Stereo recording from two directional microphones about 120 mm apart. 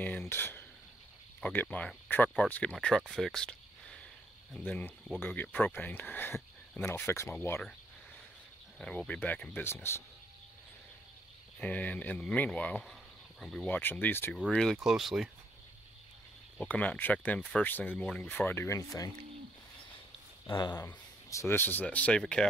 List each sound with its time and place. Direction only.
0.0 s speech: 15° left (ahead or behind)
8.7 s speech: 5° left (ahead or behind)
11.6 s speech: 10° left (ahead or behind)
13.7 s speech: 15° left (ahead or behind)
14.5 s speech: 5° left (ahead or behind)
16.5 s speech: 10° left (ahead or behind); by 19.1 s 30° left (ahead or behind)
20.5 s speech: 35° left (ahead or behind)
20.8 s speech: 20° left (ahead or behind); by 22.5 s 5° left (ahead or behind)